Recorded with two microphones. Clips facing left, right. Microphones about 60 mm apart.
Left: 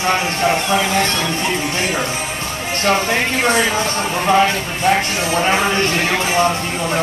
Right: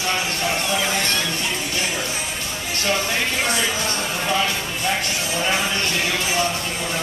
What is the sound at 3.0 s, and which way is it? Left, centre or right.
Speech, left.